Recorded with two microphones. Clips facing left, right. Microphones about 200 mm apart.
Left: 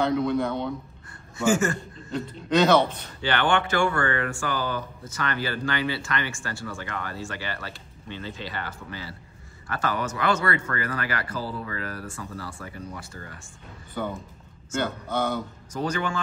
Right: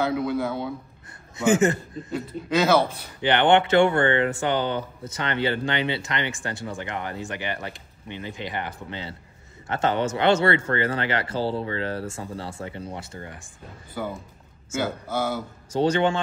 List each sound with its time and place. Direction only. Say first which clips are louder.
0.0 s a man's voice: left 1 dB; 5° right (ahead or behind)
1.4 s speech: right 3 dB; 20° right (ahead or behind)
2.1 s a man's voice: left 1 dB; 5° right (ahead or behind)
3.2 s speech: right 5 dB; 20° right (ahead or behind)
13.9 s a man's voice: even; 5° right (ahead or behind)
15.7 s speech: right 7 dB; 30° right (ahead or behind)